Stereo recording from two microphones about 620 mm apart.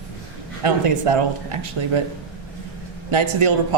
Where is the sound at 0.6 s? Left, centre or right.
Right.